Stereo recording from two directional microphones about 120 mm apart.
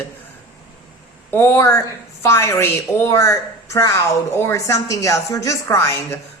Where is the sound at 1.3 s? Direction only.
20° left (ahead or behind).